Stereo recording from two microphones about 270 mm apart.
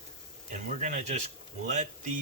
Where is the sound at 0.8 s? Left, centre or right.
Right.